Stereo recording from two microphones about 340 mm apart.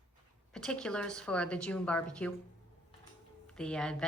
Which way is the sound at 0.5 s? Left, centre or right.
Centre.